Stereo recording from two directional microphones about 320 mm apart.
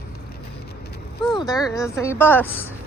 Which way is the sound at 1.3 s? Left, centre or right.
Centre.